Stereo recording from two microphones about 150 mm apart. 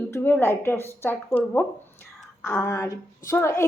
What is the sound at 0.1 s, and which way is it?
A woman's voice, 15° left (ahead or behind).